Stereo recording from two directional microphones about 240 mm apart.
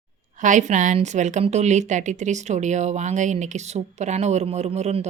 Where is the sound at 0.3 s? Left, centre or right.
Right.